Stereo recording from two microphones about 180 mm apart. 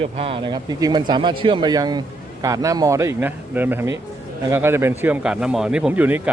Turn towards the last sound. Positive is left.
turn(degrees=-10)  # may be behind; listen again after turning